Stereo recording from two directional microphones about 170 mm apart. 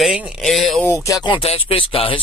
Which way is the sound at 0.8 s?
15° left (ahead or behind).